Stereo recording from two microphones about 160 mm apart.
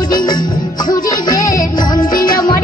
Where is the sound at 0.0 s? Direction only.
25° left (ahead or behind).